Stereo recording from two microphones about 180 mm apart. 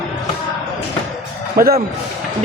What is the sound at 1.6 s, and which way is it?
Speech, 55° right (ahead or behind).